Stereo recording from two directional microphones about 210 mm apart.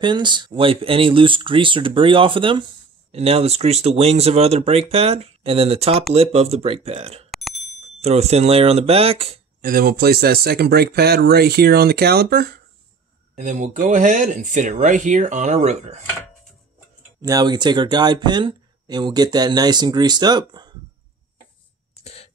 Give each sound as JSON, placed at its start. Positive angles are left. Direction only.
{"t": 0.0, "sound": "speech", "side_deg": -20}
{"t": 7.2, "sound": "bicycle bell", "side_deg": 0}
{"t": 7.8, "sound": "speech", "side_deg": -30}
{"t": 9.6, "sound": "speech", "side_deg": -45}
{"t": 13.4, "sound": "speech", "side_deg": -35}
{"t": 17.2, "sound": "speech", "side_deg": -15}
{"t": 22.0, "sound": "cough", "side_deg": 30}